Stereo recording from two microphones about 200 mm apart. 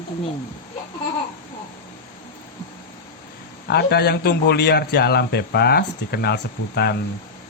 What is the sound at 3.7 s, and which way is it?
A man's voice, 55° left (ahead or behind).